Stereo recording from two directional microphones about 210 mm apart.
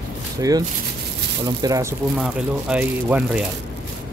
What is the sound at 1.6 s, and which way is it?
Speech, 15° right (ahead or behind).